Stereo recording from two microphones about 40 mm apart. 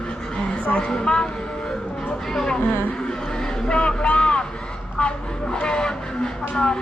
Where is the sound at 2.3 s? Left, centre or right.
Centre.